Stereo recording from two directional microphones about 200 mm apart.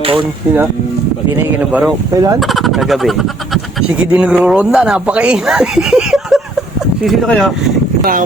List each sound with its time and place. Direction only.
0.0 s a sound: 25° right (ahead or behind)
1.5 s speech: 5° right (ahead or behind)
2.1 s speech: 15° right (ahead or behind)
2.4 s speech: centre (ahead or behind)